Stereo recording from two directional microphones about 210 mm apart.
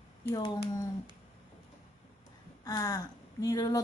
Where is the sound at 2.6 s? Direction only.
15° left (ahead or behind).